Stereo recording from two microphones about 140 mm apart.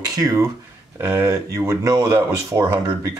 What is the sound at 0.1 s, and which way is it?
Speech, 25° right (ahead or behind).